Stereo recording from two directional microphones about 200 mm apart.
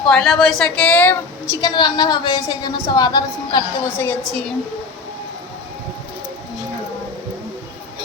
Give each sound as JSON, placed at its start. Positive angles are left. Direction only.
{"t": 0.1, "sound": "a woman's voice", "side_deg": 0}